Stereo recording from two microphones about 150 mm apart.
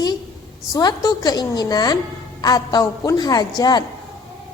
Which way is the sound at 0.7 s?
25° left (ahead or behind).